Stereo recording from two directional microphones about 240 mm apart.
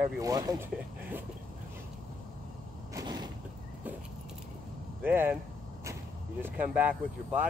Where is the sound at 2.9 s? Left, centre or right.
Centre.